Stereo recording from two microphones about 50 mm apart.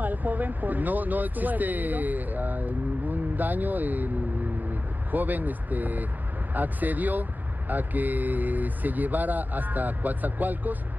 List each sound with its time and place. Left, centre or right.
0.0 s speech: right
5.1 s speech: right